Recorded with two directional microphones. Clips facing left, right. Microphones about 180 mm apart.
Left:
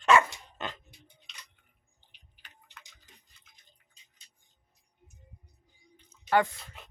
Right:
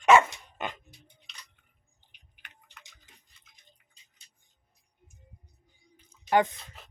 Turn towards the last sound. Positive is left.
turn(degrees=-20)  # may be behind; listen again after turning